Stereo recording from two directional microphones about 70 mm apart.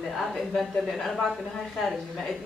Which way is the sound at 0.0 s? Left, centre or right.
Centre.